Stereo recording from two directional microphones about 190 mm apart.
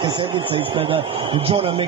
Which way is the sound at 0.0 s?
25° right (ahead or behind).